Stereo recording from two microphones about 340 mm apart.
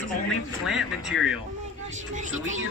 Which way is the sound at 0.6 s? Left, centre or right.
Centre.